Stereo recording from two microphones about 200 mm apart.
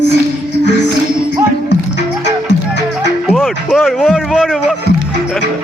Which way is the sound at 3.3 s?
Centre (ahead or behind).